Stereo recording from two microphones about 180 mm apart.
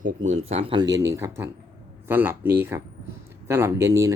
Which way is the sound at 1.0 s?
15° right (ahead or behind).